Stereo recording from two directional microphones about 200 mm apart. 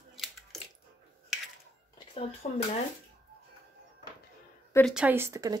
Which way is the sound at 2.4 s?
40° left (ahead or behind).